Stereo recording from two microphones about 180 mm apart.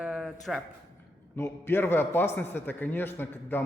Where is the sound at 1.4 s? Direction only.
15° left (ahead or behind).